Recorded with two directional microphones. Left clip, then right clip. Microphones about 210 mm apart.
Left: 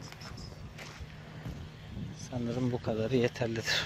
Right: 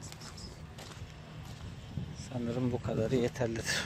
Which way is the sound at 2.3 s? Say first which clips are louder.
Left 1 dB; 15° left (ahead or behind).